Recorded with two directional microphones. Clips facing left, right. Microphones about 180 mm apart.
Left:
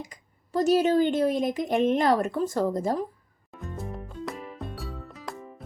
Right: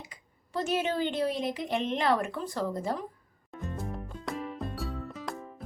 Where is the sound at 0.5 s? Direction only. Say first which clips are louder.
Left 8 dB; 40° left (ahead or behind).